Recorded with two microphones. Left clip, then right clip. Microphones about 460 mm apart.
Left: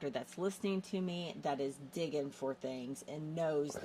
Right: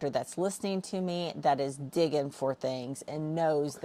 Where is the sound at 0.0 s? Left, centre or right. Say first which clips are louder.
Right 8 dB; right.